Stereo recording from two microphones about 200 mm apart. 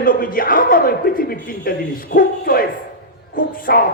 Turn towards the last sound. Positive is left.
turn(degrees=45)  # may be behind; listen again after turning